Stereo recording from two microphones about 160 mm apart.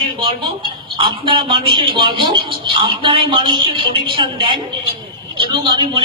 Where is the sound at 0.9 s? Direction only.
35° right (ahead or behind).